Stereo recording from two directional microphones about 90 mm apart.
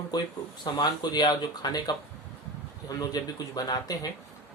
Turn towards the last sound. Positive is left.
turn(degrees=45)  # may be behind; listen again after turning